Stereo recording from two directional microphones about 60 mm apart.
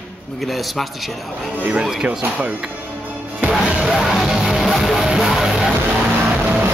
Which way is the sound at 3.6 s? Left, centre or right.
Centre.